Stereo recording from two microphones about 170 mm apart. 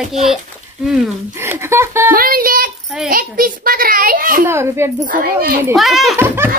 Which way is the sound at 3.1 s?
55° right (ahead or behind).